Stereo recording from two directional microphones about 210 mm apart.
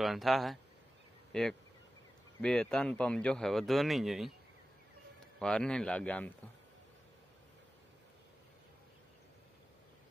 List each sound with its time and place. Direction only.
0.0 s speech: centre (ahead or behind)
5.4 s speech: 5° left (ahead or behind)